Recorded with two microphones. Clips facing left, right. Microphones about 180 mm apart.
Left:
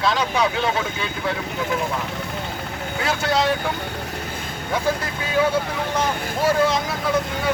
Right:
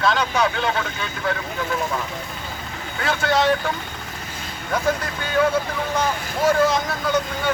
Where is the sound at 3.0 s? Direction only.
Centre (ahead or behind).